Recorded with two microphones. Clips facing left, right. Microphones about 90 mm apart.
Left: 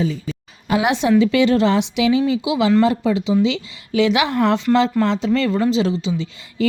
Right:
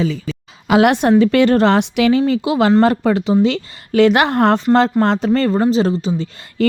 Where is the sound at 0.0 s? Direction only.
90° right.